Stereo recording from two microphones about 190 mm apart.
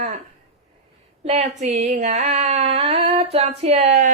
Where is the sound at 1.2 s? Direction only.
35° right (ahead or behind).